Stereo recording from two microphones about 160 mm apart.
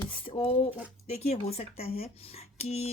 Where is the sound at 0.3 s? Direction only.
40° left (ahead or behind).